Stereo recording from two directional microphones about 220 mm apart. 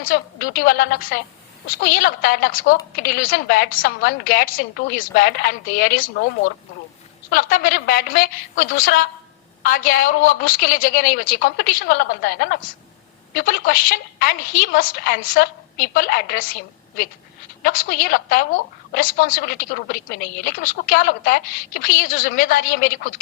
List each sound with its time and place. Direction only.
0.0 s a woman's voice: 40° left (ahead or behind)
17.6 s a woman's voice: 40° left (ahead or behind)